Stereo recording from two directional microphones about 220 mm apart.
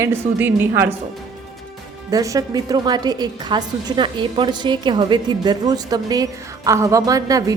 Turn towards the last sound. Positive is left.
turn(degrees=-15)  # may be behind; listen again after turning